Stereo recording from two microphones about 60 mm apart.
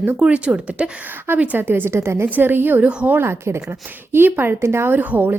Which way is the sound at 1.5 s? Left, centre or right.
Right.